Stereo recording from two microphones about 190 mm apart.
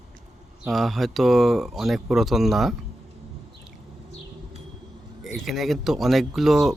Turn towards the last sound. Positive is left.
turn(degrees=0)  # may be behind; listen again after turning